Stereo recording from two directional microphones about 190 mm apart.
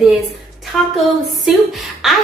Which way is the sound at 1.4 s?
Centre (ahead or behind).